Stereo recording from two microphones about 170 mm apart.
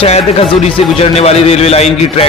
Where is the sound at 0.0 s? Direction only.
35° left (ahead or behind).